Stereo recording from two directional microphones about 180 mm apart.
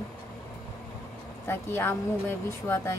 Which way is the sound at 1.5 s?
10° left (ahead or behind).